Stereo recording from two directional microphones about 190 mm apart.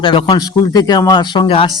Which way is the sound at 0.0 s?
20° left (ahead or behind).